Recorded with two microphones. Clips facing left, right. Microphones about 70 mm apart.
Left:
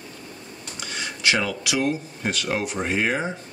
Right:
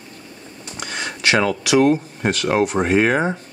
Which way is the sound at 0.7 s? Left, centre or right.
Right.